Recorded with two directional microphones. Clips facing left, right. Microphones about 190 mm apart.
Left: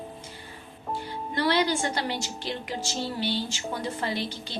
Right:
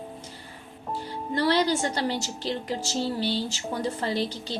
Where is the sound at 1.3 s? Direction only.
35° right (ahead or behind).